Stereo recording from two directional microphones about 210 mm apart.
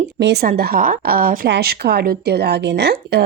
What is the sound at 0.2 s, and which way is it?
A woman's voice, 50° right (ahead or behind).